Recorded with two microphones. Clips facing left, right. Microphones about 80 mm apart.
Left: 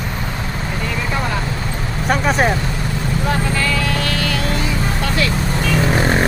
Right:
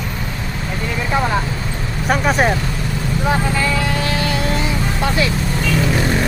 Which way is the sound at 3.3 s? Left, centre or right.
Centre.